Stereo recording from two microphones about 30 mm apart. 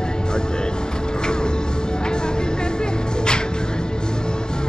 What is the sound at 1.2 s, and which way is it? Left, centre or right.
Music, left.